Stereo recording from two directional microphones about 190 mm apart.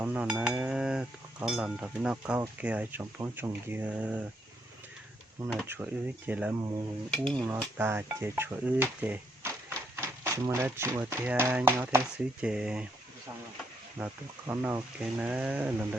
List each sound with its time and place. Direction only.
0.0 s cutlery: 5° right (ahead or behind)
2.4 s speech: 10° right (ahead or behind)
5.6 s speech: 10° right (ahead or behind)
7.3 s cutlery: 20° right (ahead or behind)
7.8 s dishes: 15° right (ahead or behind)
14.0 s speech: 10° right (ahead or behind)